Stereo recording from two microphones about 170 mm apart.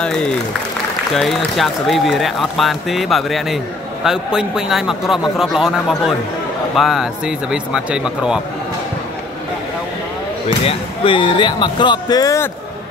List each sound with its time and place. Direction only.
0.0 s speech: 5° left (ahead or behind)
10.6 s speech: 30° left (ahead or behind)